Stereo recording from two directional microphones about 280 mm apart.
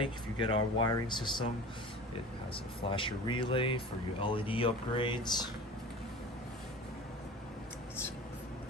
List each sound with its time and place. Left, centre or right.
0.0 s speech: centre
2.8 s speech: centre